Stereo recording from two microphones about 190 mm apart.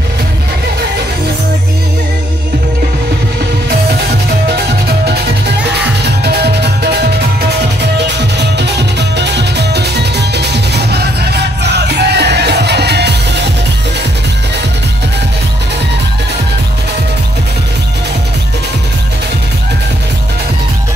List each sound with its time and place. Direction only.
4.8 s music: 55° right (ahead or behind)